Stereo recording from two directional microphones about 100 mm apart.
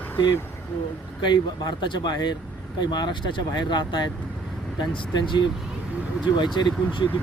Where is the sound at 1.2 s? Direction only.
50° left (ahead or behind).